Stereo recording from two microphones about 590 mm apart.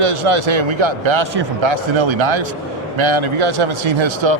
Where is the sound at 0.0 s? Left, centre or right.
Right.